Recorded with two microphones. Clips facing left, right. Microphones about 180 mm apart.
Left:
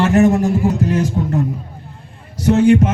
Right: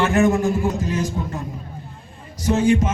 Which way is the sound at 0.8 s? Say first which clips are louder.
Left 6 dB; 65° left (ahead or behind).